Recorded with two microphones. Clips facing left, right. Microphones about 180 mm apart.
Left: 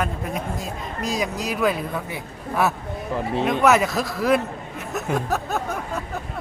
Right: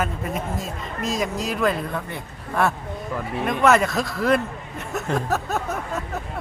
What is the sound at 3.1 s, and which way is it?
Speech, 25° left (ahead or behind).